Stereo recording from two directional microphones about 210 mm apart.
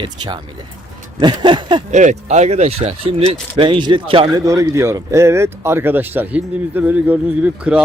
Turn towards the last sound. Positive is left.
turn(degrees=-5)  # may be behind; listen again after turning